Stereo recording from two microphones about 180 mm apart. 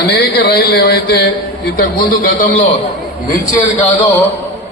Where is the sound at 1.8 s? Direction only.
50° left (ahead or behind).